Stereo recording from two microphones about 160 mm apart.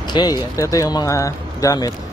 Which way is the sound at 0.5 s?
20° left (ahead or behind).